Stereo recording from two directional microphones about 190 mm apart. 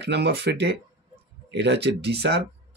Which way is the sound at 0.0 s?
60° right (ahead or behind).